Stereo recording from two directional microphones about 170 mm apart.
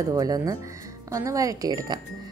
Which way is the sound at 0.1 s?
20° right (ahead or behind).